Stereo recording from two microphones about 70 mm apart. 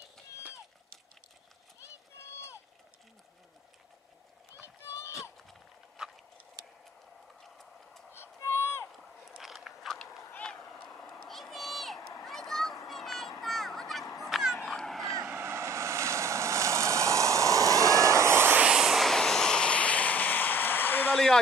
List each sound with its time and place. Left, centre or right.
2.1 s run: left
4.8 s a sound: left
5.5 s a sound: centre
7.4 s tick-tock: centre
8.1 s music: left
9.4 s biting: centre
10.4 s vehicle: centre
10.8 s cat: centre
11.1 s a sound: centre
14.0 s fowl: left
14.3 s a sound: centre
15.2 s waves: right
18.6 s vehicle: centre; by 21.2 s left